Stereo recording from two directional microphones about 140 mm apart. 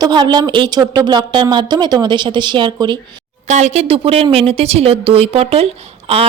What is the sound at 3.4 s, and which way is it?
A woman's voice, 55° right (ahead or behind).